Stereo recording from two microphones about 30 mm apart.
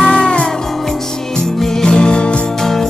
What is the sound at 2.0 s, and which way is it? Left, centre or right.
Music, left.